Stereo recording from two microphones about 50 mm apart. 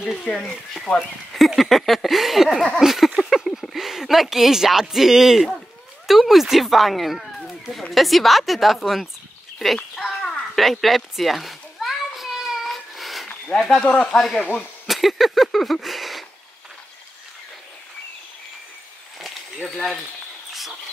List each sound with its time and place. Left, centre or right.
0.0 s speech: centre
2.8 s a sound: centre
3.7 s speech: centre
9.9 s a sound: centre
10.5 s children playing: centre
12.6 s cat: centre
13.7 s speech: centre
14.9 s a sound: centre
19.7 s speech: centre